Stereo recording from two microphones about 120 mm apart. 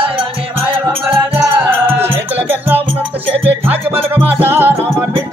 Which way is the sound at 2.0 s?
15° right (ahead or behind).